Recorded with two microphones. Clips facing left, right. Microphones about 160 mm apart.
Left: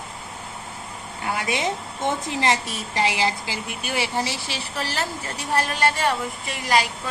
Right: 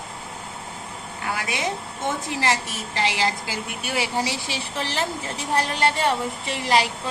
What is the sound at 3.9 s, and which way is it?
A woman's voice, 10° right (ahead or behind).